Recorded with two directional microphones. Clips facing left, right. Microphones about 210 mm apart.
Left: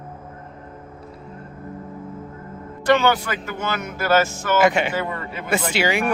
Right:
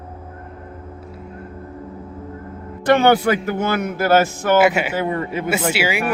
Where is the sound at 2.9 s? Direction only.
55° right (ahead or behind).